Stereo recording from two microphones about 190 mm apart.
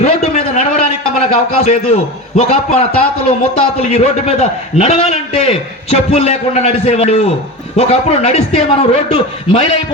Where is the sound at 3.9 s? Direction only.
35° left (ahead or behind).